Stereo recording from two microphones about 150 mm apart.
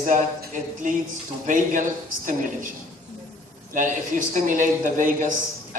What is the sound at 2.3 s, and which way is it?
Speech, 60° right (ahead or behind).